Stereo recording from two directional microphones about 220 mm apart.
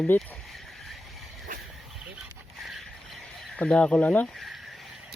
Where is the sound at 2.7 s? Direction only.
Centre (ahead or behind).